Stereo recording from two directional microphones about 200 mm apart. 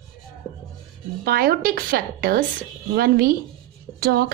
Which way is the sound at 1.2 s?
50° right (ahead or behind).